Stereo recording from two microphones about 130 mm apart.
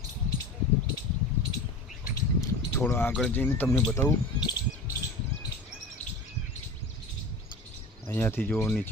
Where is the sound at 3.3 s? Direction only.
15° left (ahead or behind).